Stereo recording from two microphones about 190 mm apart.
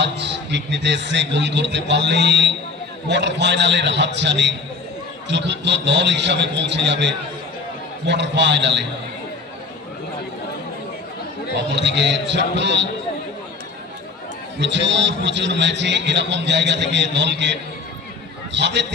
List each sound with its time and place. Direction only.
0.0 s a man's voice: 65° right (ahead or behind)
11.7 s a man's voice: 65° right (ahead or behind)
14.6 s a man's voice: 70° right (ahead or behind)